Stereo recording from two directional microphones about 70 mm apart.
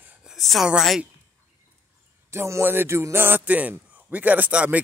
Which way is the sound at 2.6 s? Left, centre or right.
Right.